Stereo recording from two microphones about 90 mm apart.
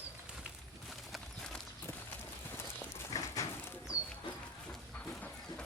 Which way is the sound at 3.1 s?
35° left (ahead or behind).